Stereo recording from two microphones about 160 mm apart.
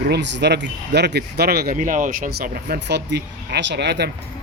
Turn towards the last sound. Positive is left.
turn(degrees=-90)